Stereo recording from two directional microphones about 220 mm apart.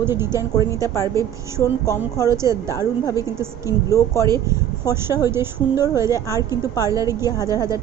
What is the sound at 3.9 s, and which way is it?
Speech, 15° left (ahead or behind).